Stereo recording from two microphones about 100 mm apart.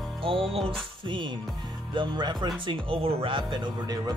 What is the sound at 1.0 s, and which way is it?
Speech, 55° right (ahead or behind).